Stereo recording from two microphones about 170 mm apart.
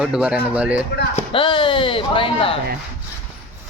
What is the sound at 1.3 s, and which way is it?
Speech, 30° left (ahead or behind).